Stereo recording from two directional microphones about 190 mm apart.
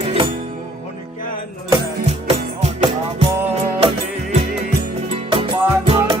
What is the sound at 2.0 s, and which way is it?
Music, 35° right (ahead or behind).